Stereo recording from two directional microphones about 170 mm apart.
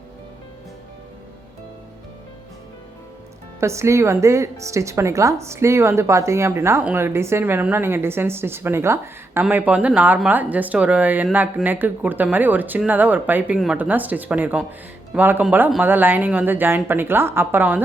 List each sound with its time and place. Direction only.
3.6 s speech: 15° right (ahead or behind)